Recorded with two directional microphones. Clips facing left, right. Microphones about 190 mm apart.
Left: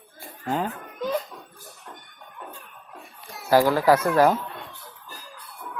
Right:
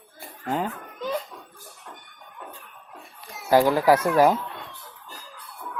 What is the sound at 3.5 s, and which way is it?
Speech, 20° right (ahead or behind).